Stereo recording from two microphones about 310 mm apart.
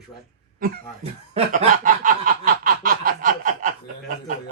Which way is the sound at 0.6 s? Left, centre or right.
Right.